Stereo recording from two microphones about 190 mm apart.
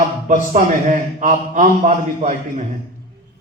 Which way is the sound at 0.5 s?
40° right (ahead or behind).